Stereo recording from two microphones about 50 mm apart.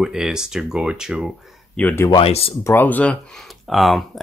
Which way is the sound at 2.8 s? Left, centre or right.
Left.